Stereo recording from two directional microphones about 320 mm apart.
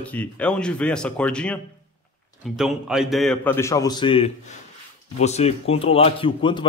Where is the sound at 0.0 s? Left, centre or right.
Centre.